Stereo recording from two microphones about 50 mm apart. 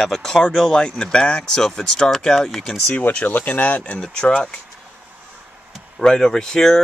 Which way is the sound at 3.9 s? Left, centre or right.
Centre.